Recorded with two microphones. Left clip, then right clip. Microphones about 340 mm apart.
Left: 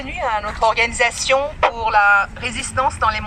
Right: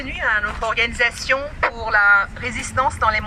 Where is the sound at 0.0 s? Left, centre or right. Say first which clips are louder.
Right 1 dB; centre.